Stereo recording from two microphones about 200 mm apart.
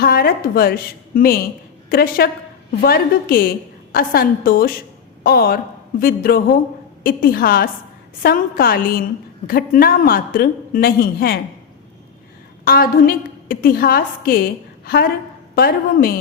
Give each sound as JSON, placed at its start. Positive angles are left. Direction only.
{"t": 0.0, "sound": "a woman's voice", "side_deg": 50}
{"t": 12.6, "sound": "a woman's voice", "side_deg": 45}